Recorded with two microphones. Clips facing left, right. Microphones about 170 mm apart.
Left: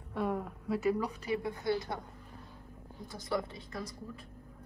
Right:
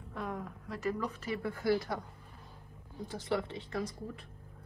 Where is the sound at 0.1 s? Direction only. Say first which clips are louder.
Left 6 dB; 5° left (ahead or behind); by 2.0 s 20° left (ahead or behind).